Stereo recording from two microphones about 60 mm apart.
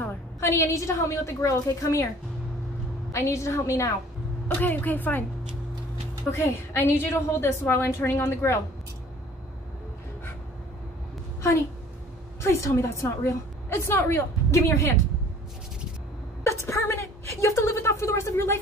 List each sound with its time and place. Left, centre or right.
0.4 s a woman's voice: left
3.1 s a woman's voice: left
4.6 s a woman's voice: left
6.3 s a woman's voice: left
12.4 s a woman's voice: left
16.4 s a sound: left